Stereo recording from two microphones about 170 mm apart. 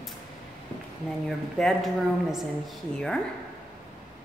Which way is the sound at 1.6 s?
Centre (ahead or behind).